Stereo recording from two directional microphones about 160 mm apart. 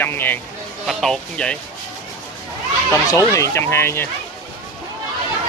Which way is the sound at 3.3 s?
15° left (ahead or behind).